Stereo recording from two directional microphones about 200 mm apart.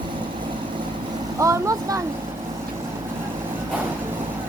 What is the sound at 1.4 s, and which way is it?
Speech, 15° right (ahead or behind).